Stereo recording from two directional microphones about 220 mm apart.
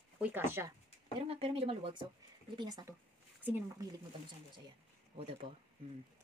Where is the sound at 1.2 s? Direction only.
25° right (ahead or behind); by 3.9 s 10° right (ahead or behind).